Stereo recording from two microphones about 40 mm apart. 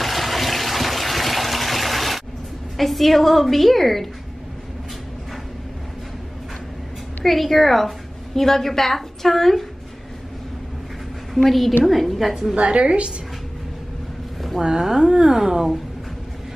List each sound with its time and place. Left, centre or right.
0.0 s water: centre
2.8 s a woman's voice: centre
7.2 s a woman's voice: centre
11.3 s a woman's voice: centre
12.5 s a woman's voice: right
14.6 s a woman's voice: centre